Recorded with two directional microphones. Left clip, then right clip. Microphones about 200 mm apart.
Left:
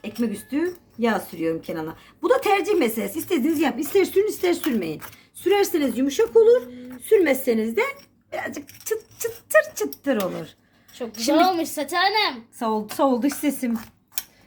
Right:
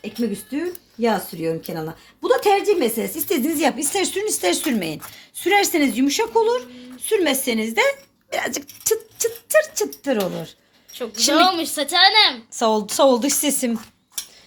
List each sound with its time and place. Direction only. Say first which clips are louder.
1.0 s a woman's voice: right 2 dB; 30° right (ahead or behind); by 12.4 s centre (ahead or behind)
12.5 s a woman's voice: right 5 dB; 20° right (ahead or behind)